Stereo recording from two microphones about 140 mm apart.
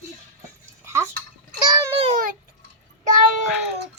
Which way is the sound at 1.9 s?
45° right (ahead or behind).